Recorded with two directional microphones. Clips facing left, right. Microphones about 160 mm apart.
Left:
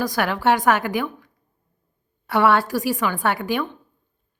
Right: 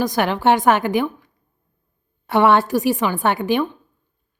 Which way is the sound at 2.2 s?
25° right (ahead or behind).